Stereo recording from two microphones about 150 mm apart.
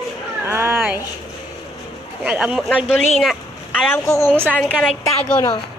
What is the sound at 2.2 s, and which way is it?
Speech, 5° right (ahead or behind).